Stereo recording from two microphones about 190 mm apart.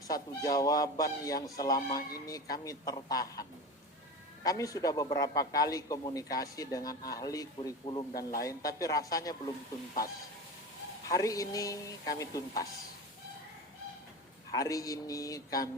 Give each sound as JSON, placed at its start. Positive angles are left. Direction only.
{"t": 0.1, "sound": "a man's voice", "side_deg": 20}
{"t": 4.4, "sound": "a man's voice", "side_deg": 15}
{"t": 8.1, "sound": "speech", "side_deg": 50}
{"t": 8.4, "sound": "a man's voice", "side_deg": 20}
{"t": 11.1, "sound": "speech", "side_deg": 20}
{"t": 14.5, "sound": "speech", "side_deg": 20}